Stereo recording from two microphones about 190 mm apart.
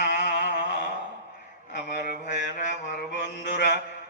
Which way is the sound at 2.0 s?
40° left (ahead or behind).